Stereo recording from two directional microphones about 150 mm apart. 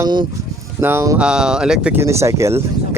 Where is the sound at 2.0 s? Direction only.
20° right (ahead or behind).